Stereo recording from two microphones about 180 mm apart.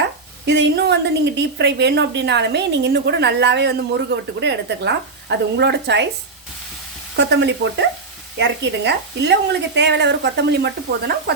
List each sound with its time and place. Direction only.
0.4 s a woman's voice: 70° right (ahead or behind)
7.2 s a woman's voice: 75° right (ahead or behind)